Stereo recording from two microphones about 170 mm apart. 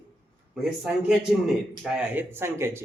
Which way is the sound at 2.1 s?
15° right (ahead or behind).